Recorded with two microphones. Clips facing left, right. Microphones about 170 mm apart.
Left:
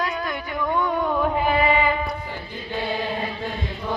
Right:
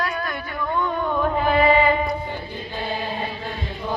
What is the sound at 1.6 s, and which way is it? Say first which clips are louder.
Music: right 6 dB; 30° right (ahead or behind).